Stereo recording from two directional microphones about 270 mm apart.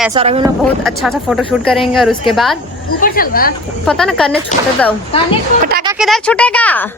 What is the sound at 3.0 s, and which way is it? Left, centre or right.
Speech, left.